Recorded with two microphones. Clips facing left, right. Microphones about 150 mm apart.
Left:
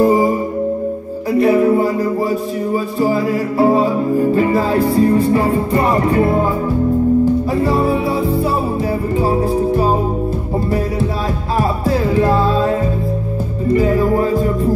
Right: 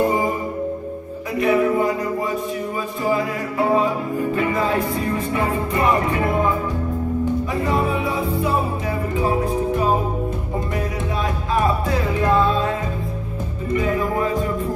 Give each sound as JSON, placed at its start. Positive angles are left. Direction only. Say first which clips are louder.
{"t": 0.0, "sound": "music", "louder": "left 7 dB", "side_deg": 35}
{"t": 1.4, "sound": "music", "louder": "left 5 dB", "side_deg": 35}
{"t": 3.0, "sound": "music", "louder": "left 5 dB", "side_deg": 35}
{"t": 7.5, "sound": "music", "louder": "left 6 dB", "side_deg": 30}
{"t": 11.5, "sound": "music", "louder": "left 3 dB", "side_deg": 35}